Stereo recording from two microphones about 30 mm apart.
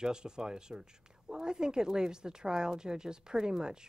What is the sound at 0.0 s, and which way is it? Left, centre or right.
Speech, right.